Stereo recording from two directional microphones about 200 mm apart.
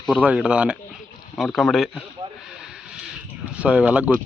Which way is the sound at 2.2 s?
25° right (ahead or behind).